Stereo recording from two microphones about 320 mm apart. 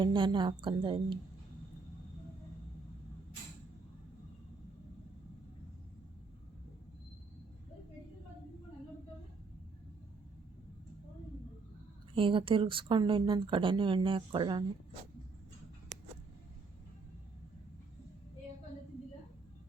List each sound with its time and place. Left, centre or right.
0.0 s a woman's voice: centre
12.1 s a woman's voice: centre